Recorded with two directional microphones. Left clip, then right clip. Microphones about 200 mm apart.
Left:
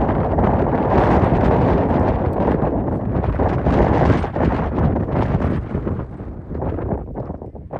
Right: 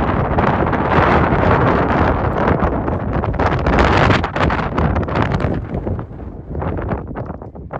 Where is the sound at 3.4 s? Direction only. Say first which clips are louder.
Right 3 dB; 30° left (ahead or behind).